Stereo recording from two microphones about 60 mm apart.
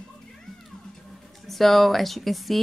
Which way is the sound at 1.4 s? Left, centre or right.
Centre.